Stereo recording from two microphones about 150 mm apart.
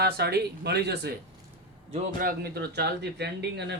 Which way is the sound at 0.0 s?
90° right.